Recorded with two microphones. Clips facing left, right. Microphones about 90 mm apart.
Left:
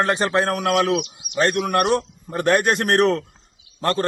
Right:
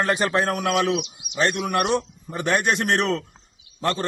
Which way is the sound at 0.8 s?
50° left (ahead or behind).